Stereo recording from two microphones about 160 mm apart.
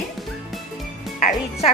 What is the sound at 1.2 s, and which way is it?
Speech, 40° left (ahead or behind).